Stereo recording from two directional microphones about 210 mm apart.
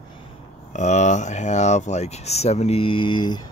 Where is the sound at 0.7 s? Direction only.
35° left (ahead or behind).